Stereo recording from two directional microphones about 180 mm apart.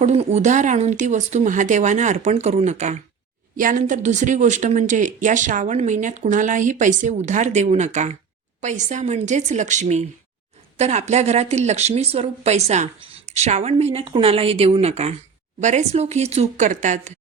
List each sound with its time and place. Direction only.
0.0 s speech: 35° right (ahead or behind)